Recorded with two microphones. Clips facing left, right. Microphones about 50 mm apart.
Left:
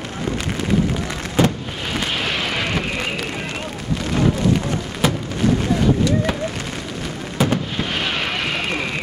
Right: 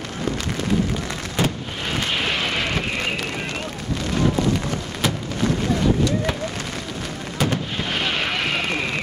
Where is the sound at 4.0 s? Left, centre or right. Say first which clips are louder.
Left 2 dB; centre.